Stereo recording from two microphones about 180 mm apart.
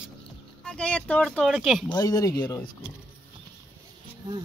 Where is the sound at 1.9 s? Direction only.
20° left (ahead or behind).